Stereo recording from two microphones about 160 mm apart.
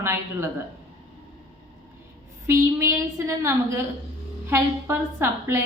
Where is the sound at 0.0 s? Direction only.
15° right (ahead or behind).